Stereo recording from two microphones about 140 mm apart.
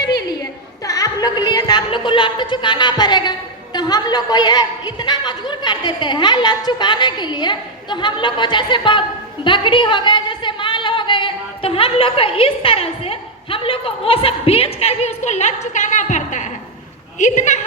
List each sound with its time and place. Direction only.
0.9 s a woman's voice: 25° left (ahead or behind); by 17.6 s 55° left (ahead or behind)